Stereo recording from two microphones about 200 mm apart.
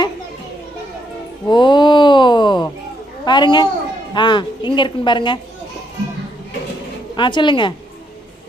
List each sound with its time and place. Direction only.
1.5 s a sound: 25° left (ahead or behind)
3.2 s a woman's voice: 20° left (ahead or behind)
7.2 s speech: 25° left (ahead or behind)